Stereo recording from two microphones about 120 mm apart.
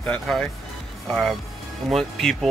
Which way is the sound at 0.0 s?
5° left (ahead or behind).